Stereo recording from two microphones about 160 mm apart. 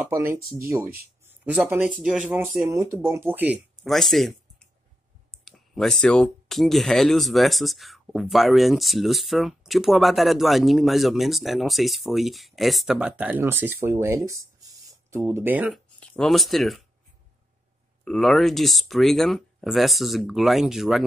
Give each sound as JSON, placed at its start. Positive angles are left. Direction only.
{"t": 0.0, "sound": "speech", "side_deg": -15}
{"t": 2.0, "sound": "speech", "side_deg": -5}
{"t": 2.7, "sound": "speech", "side_deg": -15}
{"t": 3.8, "sound": "speech", "side_deg": 0}
{"t": 16.1, "sound": "speech", "side_deg": 0}
{"t": 18.0, "sound": "speech", "side_deg": 0}